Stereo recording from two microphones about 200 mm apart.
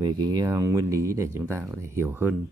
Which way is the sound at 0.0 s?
20° right (ahead or behind).